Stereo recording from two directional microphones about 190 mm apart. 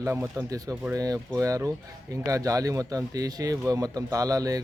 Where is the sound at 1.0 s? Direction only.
20° right (ahead or behind).